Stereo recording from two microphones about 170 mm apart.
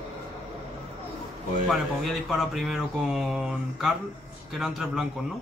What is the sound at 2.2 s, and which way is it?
Speech, centre (ahead or behind).